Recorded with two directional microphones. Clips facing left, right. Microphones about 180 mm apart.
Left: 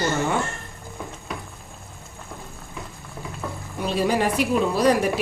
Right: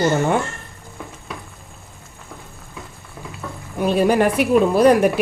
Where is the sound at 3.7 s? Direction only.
55° right (ahead or behind).